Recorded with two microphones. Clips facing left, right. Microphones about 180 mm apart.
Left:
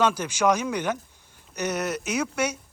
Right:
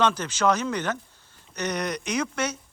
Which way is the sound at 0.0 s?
10° left (ahead or behind).